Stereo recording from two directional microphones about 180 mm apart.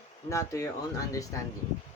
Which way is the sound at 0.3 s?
15° left (ahead or behind).